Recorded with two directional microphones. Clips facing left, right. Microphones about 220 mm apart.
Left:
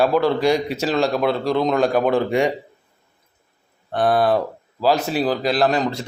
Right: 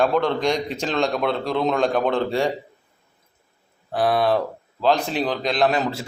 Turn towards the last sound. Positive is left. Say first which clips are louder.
# left 2 dB
turn(degrees=-5)  # may be behind; listen again after turning